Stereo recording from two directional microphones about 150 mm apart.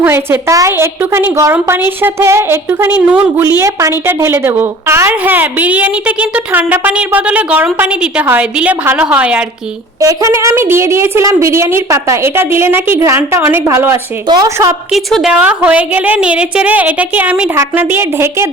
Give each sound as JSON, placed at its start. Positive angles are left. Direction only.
{"t": 0.0, "sound": "a woman's voice", "side_deg": -15}
{"t": 10.0, "sound": "a woman's voice", "side_deg": -20}
{"t": 14.9, "sound": "a woman's voice", "side_deg": 0}